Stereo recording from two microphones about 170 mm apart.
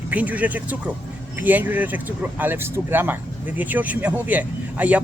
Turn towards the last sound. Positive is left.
turn(degrees=-10)  # may be behind; listen again after turning